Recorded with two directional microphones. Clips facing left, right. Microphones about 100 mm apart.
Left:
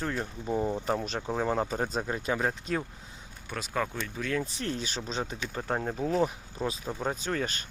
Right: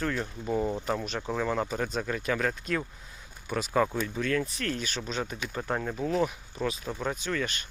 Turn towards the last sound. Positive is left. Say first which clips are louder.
# even
turn(degrees=35)  # may be behind; listen again after turning